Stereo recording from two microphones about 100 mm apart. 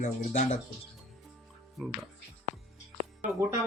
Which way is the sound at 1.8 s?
Centre (ahead or behind).